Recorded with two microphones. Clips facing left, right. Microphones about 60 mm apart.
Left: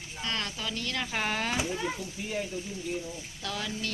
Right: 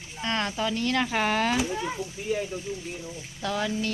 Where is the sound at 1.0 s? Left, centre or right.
Right.